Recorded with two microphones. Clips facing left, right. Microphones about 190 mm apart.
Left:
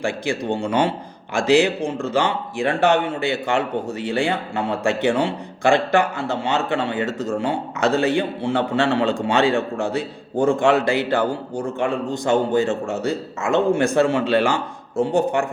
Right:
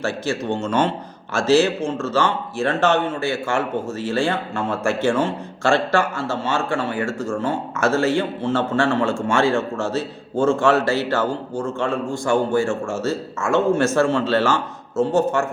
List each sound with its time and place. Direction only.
0.0 s a man's voice: 15° left (ahead or behind)